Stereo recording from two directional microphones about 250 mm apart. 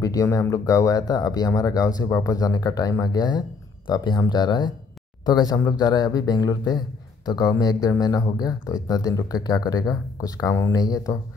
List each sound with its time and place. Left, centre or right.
0.0 s speech: centre